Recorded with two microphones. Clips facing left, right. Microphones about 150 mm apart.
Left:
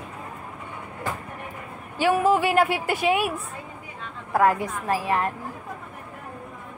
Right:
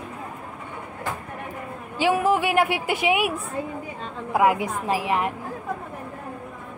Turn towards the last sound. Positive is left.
turn(degrees=-15)  # may be behind; listen again after turning